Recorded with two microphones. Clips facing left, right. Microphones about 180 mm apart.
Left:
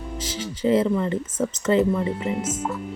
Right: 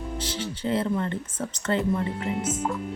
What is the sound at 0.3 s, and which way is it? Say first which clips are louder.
Music: left 1 dB; 5° left (ahead or behind).